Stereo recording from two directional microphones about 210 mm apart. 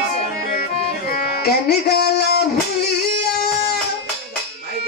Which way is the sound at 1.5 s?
50° left (ahead or behind).